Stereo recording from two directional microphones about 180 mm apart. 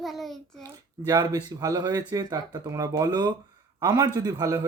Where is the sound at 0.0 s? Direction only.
Centre (ahead or behind).